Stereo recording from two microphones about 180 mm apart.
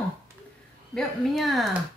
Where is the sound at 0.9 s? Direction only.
Centre (ahead or behind).